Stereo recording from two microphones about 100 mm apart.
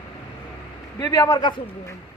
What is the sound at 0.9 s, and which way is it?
Speech, 35° left (ahead or behind).